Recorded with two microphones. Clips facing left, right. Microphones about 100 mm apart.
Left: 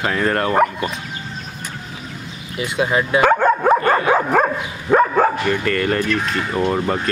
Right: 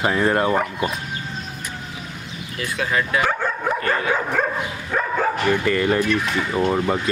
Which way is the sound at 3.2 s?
55° left (ahead or behind).